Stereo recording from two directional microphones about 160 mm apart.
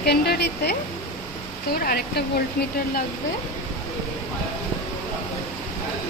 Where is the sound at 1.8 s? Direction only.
70° left (ahead or behind).